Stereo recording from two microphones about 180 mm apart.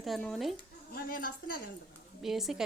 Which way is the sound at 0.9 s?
50° left (ahead or behind).